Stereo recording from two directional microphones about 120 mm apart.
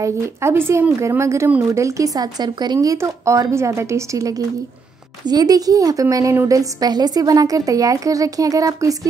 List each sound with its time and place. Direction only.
0.0 s a woman's voice: 20° right (ahead or behind)